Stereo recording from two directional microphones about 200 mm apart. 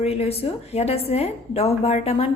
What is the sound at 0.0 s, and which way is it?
A woman's voice, 30° left (ahead or behind).